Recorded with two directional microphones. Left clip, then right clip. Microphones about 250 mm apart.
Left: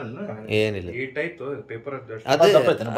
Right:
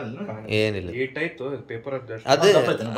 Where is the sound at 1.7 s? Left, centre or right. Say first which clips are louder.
Right 2 dB; right.